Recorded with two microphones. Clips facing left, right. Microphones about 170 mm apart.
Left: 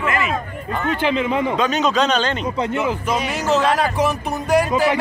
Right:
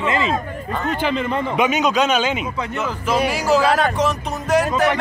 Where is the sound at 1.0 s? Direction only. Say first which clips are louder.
Left 3 dB; 5° left (ahead or behind).